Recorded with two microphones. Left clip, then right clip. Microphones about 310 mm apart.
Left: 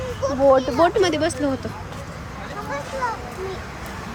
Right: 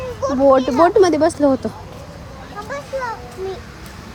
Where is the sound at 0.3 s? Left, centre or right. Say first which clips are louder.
Right 3 dB; right.